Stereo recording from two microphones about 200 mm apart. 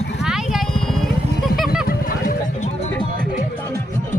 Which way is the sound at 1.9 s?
45° left (ahead or behind).